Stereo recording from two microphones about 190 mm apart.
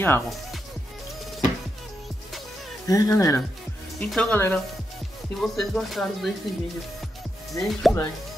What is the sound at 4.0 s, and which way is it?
Speech, 5° left (ahead or behind).